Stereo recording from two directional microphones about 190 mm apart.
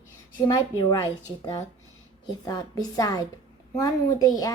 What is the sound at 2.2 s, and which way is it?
A woman's voice, 20° left (ahead or behind).